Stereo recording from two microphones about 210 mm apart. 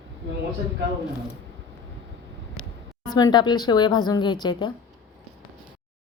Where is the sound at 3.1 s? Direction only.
20° left (ahead or behind).